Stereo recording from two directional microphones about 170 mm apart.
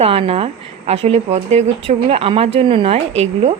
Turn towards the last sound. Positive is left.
turn(degrees=-35)  # may be behind; listen again after turning